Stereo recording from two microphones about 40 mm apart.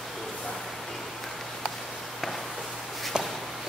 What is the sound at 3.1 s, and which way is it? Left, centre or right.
Walk, right.